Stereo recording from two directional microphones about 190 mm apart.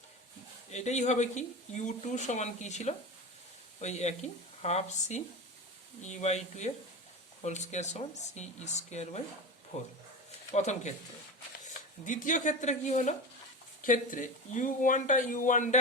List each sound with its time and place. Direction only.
0.7 s speech: 35° left (ahead or behind)